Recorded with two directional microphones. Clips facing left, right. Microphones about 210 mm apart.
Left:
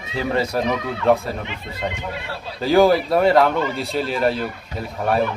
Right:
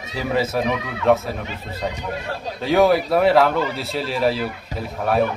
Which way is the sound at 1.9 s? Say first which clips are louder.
Right 2 dB; 40° right (ahead or behind).